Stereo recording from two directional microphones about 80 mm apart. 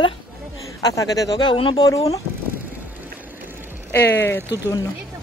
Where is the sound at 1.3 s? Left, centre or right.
Left.